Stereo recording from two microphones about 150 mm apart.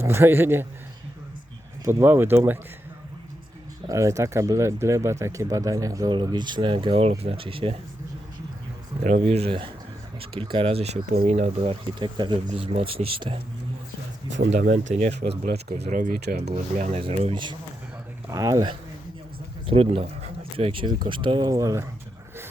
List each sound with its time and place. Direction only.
0.0 s speech: 15° right (ahead or behind)
1.8 s speech: 15° right (ahead or behind)
3.8 s speech: 20° right (ahead or behind); by 7.8 s 35° right (ahead or behind)
9.0 s speech: 45° right (ahead or behind)
11.7 s speech: 30° right (ahead or behind)
14.6 s speech: 60° right (ahead or behind)
15.8 s speech: 65° right (ahead or behind); by 16.4 s 80° right
16.5 s speech: 50° right (ahead or behind)
17.0 s speech: 40° right (ahead or behind)
18.3 s speech: 20° right (ahead or behind)
19.6 s speech: 40° right (ahead or behind); by 21.8 s 20° right (ahead or behind)